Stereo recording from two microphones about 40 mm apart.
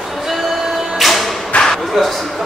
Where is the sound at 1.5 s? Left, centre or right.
Left.